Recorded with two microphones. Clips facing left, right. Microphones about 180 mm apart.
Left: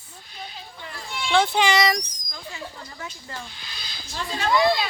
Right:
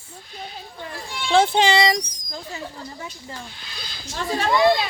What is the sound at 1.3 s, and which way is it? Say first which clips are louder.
Speech: right 3 dB; 35° right (ahead or behind).